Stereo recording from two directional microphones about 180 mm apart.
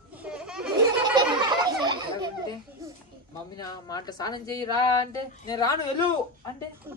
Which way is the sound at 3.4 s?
20° left (ahead or behind).